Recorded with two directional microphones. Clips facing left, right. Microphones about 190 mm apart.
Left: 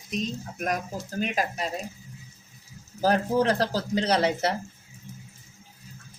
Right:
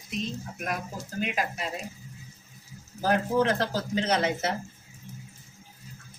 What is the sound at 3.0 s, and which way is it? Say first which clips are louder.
Speech: left 2 dB; 35° left (ahead or behind).